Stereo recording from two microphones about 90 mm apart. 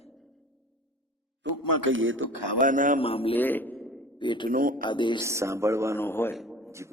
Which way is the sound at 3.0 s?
90° left.